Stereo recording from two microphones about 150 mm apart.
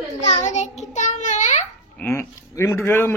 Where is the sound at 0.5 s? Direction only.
50° left (ahead or behind).